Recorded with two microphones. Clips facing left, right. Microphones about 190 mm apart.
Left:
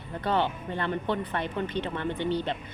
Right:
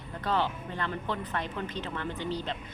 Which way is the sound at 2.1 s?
65° left (ahead or behind).